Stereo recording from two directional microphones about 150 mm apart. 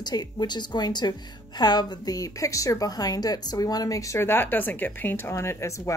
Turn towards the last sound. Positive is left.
turn(degrees=20)  # may be behind; listen again after turning